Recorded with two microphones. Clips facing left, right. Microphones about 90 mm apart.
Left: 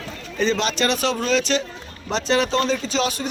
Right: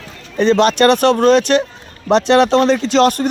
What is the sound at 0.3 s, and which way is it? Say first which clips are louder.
Speech: right 9 dB; 60° right (ahead or behind).